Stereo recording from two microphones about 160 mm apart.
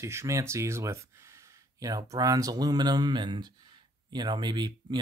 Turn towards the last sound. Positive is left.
turn(degrees=-30)  # may be behind; listen again after turning